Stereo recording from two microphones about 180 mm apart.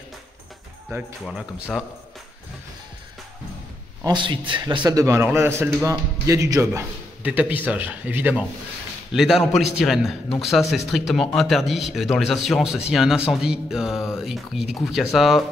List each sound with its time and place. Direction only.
0.9 s a man's voice: 15° right (ahead or behind)
1.2 s speech: centre (ahead or behind)
4.0 s a man's voice: 25° right (ahead or behind); by 15.4 s centre (ahead or behind)